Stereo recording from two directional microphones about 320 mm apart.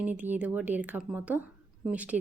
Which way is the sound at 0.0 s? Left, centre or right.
Centre.